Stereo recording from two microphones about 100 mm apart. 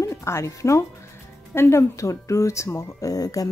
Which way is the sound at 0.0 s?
30° left (ahead or behind).